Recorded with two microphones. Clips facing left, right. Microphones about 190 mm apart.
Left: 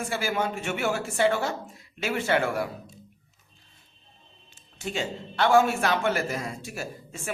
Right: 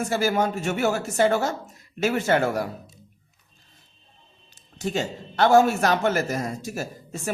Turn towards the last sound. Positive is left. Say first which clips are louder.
# right 4 dB
turn(degrees=-40)  # may be behind; listen again after turning